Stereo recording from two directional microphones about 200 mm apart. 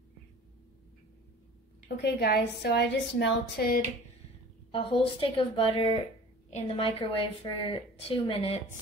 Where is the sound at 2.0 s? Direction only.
55° left (ahead or behind).